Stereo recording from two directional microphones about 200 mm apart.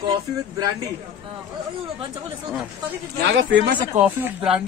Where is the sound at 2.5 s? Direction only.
5° right (ahead or behind).